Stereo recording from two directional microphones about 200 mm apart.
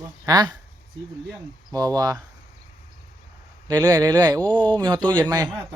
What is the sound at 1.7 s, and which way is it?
Speech, 20° right (ahead or behind).